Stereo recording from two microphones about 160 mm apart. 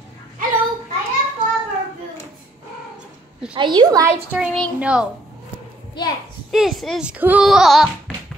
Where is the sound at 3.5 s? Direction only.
30° right (ahead or behind).